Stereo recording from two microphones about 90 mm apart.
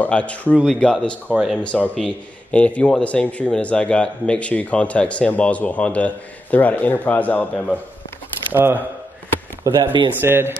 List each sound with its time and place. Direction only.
0.0 s a man's voice: 15° left (ahead or behind)
1.3 s speech: 10° right (ahead or behind)
2.0 s a man's voice: 10° left (ahead or behind)
8.5 s speech: 20° right (ahead or behind)
9.8 s speech: 65° right (ahead or behind)
10.2 s speech: 25° right (ahead or behind)